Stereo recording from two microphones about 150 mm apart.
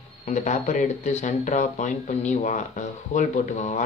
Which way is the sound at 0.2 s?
55° left (ahead or behind).